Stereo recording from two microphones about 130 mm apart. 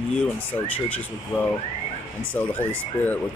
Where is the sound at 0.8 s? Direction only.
10° left (ahead or behind).